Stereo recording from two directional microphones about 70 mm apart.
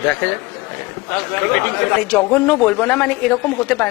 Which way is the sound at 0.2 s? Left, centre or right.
Centre.